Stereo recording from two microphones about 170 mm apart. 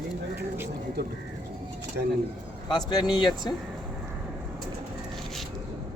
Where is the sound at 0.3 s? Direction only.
15° right (ahead or behind).